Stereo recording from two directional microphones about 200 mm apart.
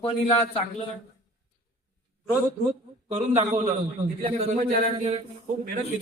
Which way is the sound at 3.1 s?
35° right (ahead or behind).